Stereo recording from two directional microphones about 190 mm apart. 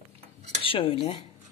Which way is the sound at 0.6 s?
30° left (ahead or behind).